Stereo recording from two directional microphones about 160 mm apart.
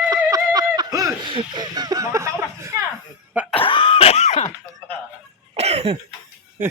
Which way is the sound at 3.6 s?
30° left (ahead or behind).